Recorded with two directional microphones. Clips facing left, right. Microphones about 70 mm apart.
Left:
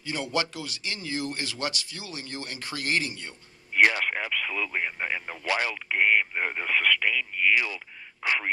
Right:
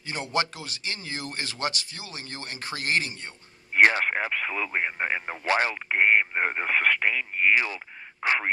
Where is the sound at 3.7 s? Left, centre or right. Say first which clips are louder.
Right 2 dB; right.